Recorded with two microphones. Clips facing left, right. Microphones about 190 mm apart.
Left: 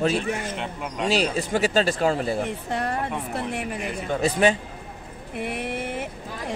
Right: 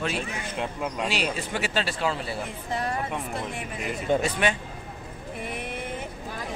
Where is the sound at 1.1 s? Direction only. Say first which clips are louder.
Left 6 dB; 40° left (ahead or behind).